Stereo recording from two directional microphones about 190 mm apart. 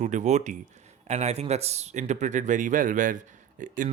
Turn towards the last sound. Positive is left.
turn(degrees=-45)  # may be behind; listen again after turning